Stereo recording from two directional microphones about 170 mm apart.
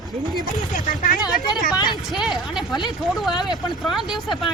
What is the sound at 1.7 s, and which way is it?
Speech, 25° left (ahead or behind).